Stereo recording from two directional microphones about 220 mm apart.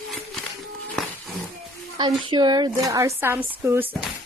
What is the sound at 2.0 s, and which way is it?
A woman's voice, 20° right (ahead or behind).